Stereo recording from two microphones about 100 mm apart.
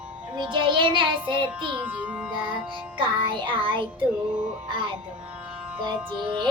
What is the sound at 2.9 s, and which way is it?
Music, 55° right (ahead or behind).